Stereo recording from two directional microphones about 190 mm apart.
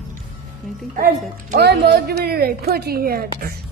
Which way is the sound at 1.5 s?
55° right (ahead or behind).